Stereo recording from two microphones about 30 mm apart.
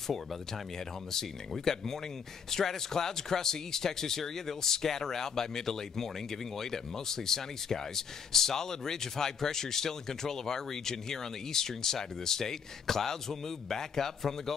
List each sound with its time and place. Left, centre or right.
1.6 s speech: centre